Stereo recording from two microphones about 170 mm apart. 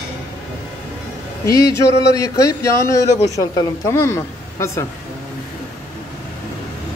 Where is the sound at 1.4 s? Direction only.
20° left (ahead or behind).